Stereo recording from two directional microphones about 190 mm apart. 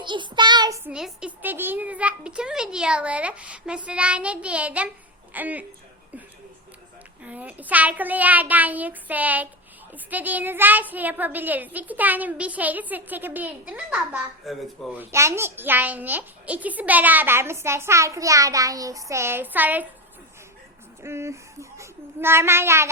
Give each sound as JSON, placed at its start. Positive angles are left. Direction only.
{"t": 0.0, "sound": "child singing", "side_deg": -25}
{"t": 0.9, "sound": "a woman's voice", "side_deg": -5}
{"t": 7.3, "sound": "a woman's voice", "side_deg": -10}
{"t": 15.1, "sound": "a woman's voice", "side_deg": -15}
{"t": 21.0, "sound": "a child's voice", "side_deg": -15}